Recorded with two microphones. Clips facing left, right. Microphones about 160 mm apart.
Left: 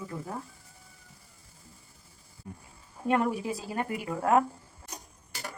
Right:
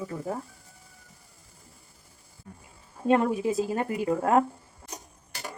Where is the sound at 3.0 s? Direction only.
25° right (ahead or behind).